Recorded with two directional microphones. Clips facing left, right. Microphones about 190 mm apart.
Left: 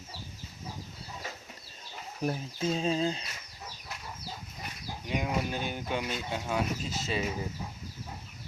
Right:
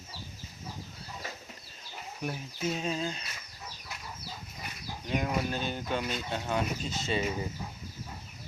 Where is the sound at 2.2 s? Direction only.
30° left (ahead or behind).